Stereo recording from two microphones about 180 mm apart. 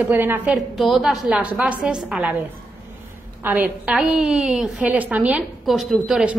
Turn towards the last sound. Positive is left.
turn(degrees=-5)  # may be behind; listen again after turning